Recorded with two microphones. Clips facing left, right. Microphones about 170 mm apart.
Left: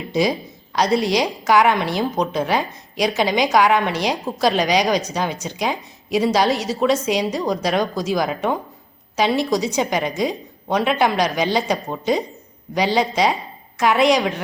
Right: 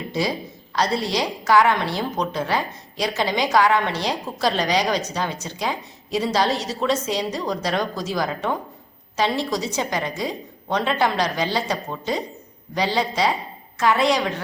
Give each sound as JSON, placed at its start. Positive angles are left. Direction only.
{"t": 0.1, "sound": "a woman's voice", "side_deg": 15}